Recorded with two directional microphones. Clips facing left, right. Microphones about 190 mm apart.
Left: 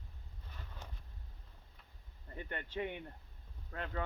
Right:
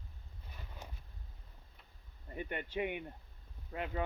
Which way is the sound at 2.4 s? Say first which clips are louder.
Right 3 dB; 15° right (ahead or behind).